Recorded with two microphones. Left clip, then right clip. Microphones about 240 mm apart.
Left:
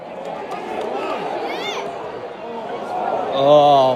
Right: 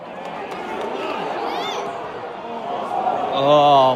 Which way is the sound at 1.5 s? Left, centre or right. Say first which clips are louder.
Even; centre.